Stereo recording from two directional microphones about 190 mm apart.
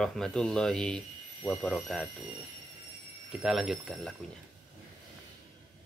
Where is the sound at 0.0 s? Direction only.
5° left (ahead or behind).